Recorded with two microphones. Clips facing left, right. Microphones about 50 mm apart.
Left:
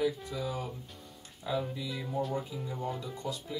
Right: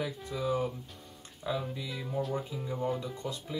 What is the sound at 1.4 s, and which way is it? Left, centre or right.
Speech, centre.